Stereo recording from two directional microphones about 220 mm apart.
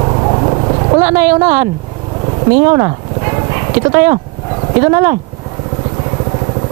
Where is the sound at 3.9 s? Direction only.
15° right (ahead or behind).